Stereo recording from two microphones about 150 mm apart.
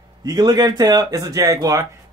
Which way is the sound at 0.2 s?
25° right (ahead or behind).